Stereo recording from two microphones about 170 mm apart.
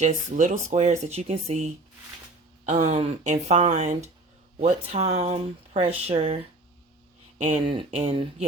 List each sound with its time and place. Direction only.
0.0 s speech: 45° right (ahead or behind)